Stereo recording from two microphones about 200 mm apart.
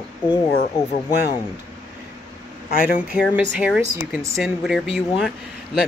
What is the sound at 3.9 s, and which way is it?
Speech, 15° right (ahead or behind).